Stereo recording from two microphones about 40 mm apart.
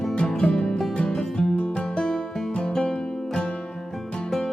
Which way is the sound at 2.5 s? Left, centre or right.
Left.